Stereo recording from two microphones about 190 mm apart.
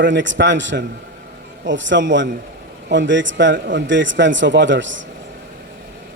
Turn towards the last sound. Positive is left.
turn(degrees=-75)  # may be behind; listen again after turning